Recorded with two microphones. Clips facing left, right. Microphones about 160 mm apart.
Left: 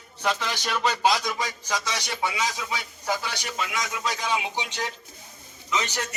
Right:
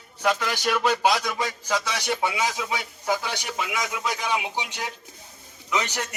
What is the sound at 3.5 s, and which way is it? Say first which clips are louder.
A man's voice: right 1 dB; 10° right (ahead or behind).